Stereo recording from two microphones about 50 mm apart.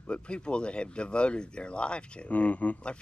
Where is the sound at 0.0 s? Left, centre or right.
Left.